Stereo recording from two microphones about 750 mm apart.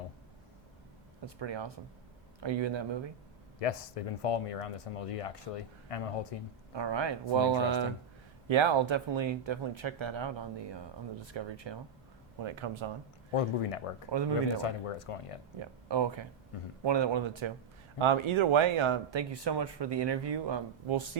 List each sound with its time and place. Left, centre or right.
1.4 s speech: right
3.6 s speech: left
6.7 s speech: right
13.3 s speech: left
14.1 s speech: right
14.6 s speech: left
15.5 s speech: right